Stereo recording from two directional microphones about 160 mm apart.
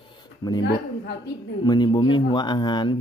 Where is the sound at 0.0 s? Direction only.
30° left (ahead or behind).